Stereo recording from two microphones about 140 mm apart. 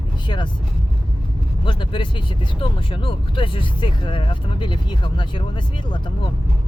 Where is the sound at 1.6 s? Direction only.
35° left (ahead or behind).